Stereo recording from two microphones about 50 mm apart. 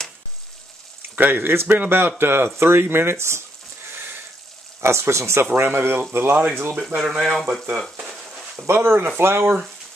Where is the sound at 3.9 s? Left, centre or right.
Right.